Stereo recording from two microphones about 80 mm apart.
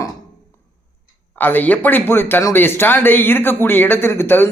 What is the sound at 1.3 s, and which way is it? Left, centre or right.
A man's voice, left.